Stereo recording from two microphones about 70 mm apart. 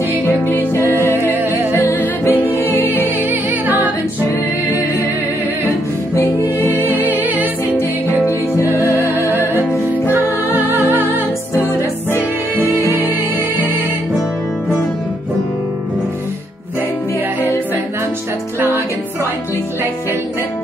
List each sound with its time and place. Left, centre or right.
0.7 s music: right
2.2 s music: left
3.3 s music: right
6.6 s music: right
8.5 s music: right
12.5 s music: right